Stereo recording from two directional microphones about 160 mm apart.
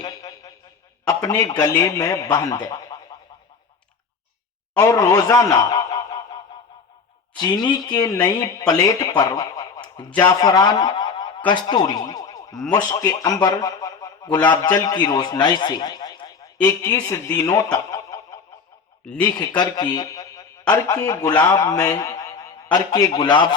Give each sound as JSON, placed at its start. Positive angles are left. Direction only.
{"t": 0.0, "sound": "a sound", "side_deg": 20}
{"t": 1.0, "sound": "speech", "side_deg": 20}
{"t": 4.8, "sound": "a man's voice", "side_deg": 20}
{"t": 10.1, "sound": "speech", "side_deg": 10}
{"t": 10.4, "sound": "a man's voice", "side_deg": 25}